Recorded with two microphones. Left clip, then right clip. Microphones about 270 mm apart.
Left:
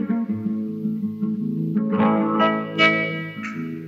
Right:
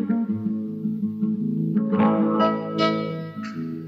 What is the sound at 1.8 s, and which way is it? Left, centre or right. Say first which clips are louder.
Music: left 1 dB; right.